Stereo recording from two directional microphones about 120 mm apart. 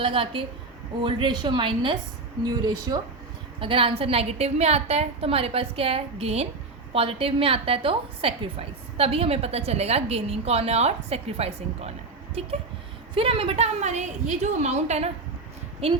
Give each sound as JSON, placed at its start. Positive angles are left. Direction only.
{"t": 0.0, "sound": "a woman's voice", "side_deg": -45}
{"t": 3.6, "sound": "a woman's voice", "side_deg": -50}
{"t": 15.8, "sound": "a woman's voice", "side_deg": -55}